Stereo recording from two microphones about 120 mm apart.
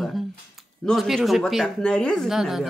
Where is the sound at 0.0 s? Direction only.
Centre (ahead or behind).